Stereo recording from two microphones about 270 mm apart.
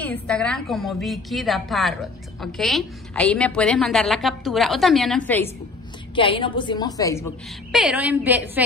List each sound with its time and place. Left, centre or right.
0.0 s a woman's voice: centre
6.1 s a woman's voice: centre
7.7 s a woman's voice: centre